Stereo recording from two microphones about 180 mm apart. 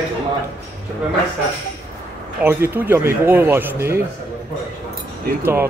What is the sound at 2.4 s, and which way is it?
Speech, 10° right (ahead or behind).